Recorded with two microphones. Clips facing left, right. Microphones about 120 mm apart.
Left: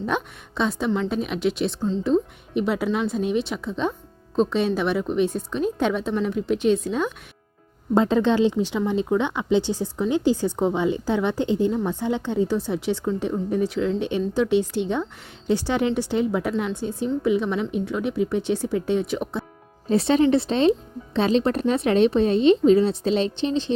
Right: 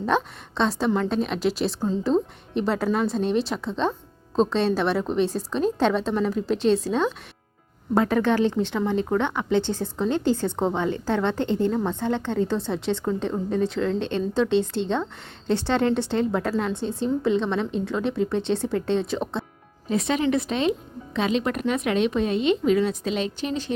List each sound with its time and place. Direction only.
0.0 s a woman's voice: centre (ahead or behind)
7.9 s a woman's voice: 20° left (ahead or behind); by 19.2 s 5° left (ahead or behind)
19.9 s speech: 35° left (ahead or behind)